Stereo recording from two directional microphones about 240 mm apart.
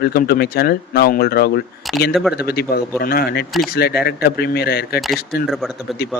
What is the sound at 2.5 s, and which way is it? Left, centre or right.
Speech, left.